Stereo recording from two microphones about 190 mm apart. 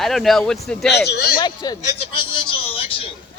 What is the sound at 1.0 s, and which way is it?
Speech, 60° left (ahead or behind).